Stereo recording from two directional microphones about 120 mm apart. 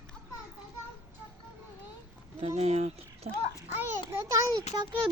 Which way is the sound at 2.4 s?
60° right (ahead or behind).